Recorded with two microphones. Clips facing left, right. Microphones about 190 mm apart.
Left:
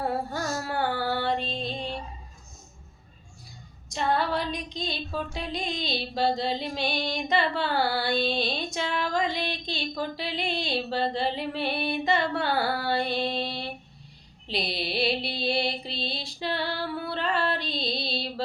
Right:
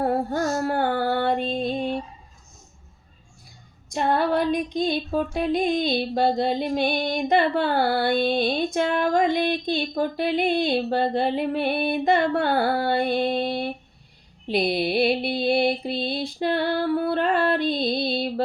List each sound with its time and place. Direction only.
0.0 s music: 50° right (ahead or behind)
3.8 s female singing: 55° right (ahead or behind)